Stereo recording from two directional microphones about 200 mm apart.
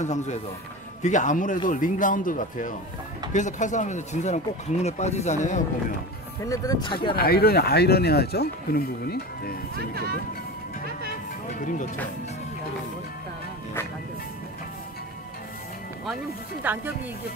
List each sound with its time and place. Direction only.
0.0 s speech: 35° left (ahead or behind)
6.4 s speech: 15° left (ahead or behind)
7.2 s speech: 50° left (ahead or behind)
9.8 s speech: 50° right (ahead or behind)
16.6 s speech: 10° right (ahead or behind)